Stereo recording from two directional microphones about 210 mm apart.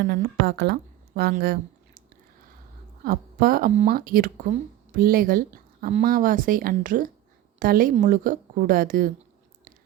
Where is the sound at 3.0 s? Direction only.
45° right (ahead or behind).